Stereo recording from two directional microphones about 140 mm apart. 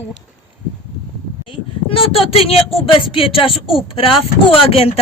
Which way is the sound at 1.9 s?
40° left (ahead or behind).